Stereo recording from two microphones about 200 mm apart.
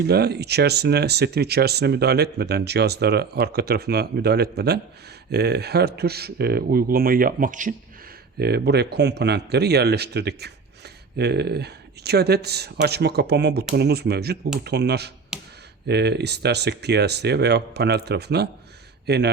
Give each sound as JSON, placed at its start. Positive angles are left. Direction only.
{"t": 0.0, "sound": "speech", "side_deg": -55}
{"t": 8.4, "sound": "speech", "side_deg": -55}
{"t": 15.3, "sound": "a sound", "side_deg": -5}
{"t": 15.9, "sound": "speech", "side_deg": -55}